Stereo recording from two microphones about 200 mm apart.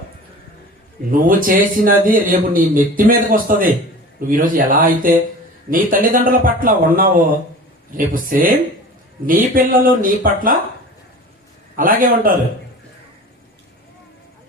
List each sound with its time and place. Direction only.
1.1 s a man's voice: 45° right (ahead or behind)
11.8 s a man's voice: 45° right (ahead or behind)